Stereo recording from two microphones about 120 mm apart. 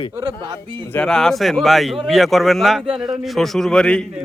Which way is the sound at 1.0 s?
5° left (ahead or behind).